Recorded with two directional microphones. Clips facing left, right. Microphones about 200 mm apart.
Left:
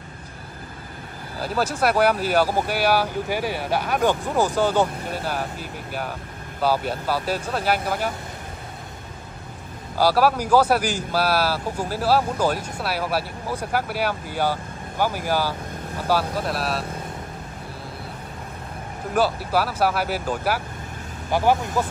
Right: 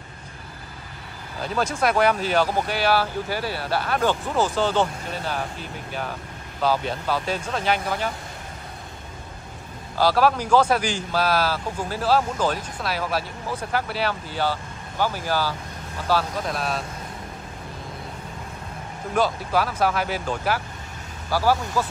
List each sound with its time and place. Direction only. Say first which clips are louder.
1.4 s speech: left 1 dB; 5° left (ahead or behind)
9.9 s speech: left 1 dB; 10° left (ahead or behind)
19.1 s speech: left 1 dB; 10° left (ahead or behind)
21.3 s speech: left 2 dB; 20° left (ahead or behind)